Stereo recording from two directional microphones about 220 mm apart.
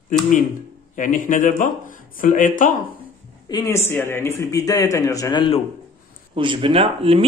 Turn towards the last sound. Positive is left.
turn(degrees=-25)  # may be behind; listen again after turning